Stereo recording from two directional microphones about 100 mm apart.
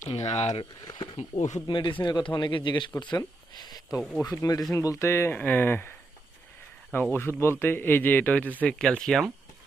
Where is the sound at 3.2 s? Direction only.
40° left (ahead or behind).